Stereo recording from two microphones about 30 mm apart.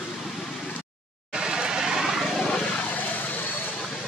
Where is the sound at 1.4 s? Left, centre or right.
Right.